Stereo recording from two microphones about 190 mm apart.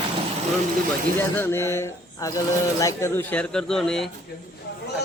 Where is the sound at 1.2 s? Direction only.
10° left (ahead or behind).